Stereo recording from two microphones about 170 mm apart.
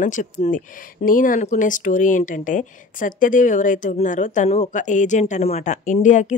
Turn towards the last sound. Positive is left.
turn(degrees=45)  # may be behind; listen again after turning